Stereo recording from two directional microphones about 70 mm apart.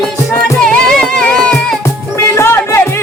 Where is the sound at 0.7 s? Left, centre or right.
Centre.